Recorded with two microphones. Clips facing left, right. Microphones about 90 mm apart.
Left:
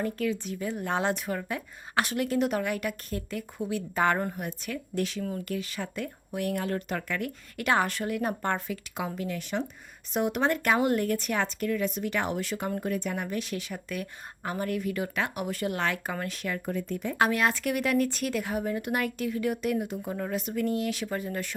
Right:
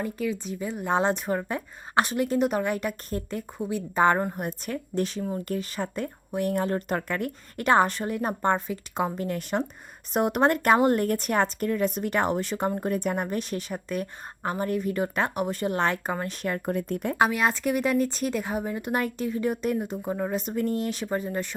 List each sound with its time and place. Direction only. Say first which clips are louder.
0.0 s speech: even; 15° right (ahead or behind)
4.4 s a woman's voice: right 3 dB; 40° right (ahead or behind); by 8.8 s 25° right (ahead or behind)
9.0 s a woman's voice: right 6 dB; 40° right (ahead or behind)
16.4 s speech: right 4 dB; 45° right (ahead or behind)
17.2 s speech: right 1 dB; 15° right (ahead or behind)
20.4 s a woman's voice: right 1 dB; 35° right (ahead or behind)